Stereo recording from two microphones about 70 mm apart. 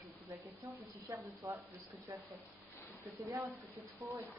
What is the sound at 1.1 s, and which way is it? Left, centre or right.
Speech, right.